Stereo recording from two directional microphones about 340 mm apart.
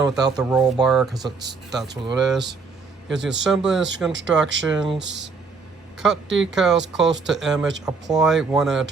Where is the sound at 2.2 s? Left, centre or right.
Centre.